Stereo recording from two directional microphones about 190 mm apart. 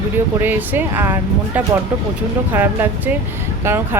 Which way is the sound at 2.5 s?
10° right (ahead or behind).